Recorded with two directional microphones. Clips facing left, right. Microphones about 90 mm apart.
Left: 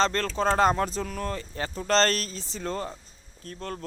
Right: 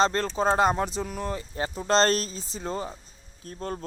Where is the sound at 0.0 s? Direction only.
15° right (ahead or behind).